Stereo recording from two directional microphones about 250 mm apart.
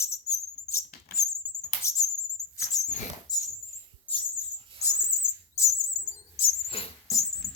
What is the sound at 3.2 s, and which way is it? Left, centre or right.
Rodents, centre.